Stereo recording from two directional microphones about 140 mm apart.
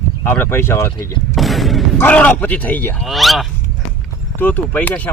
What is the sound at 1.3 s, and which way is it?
Artillery fire, centre (ahead or behind).